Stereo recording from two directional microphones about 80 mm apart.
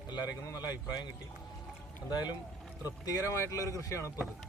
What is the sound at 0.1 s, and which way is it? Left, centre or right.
Speech, left.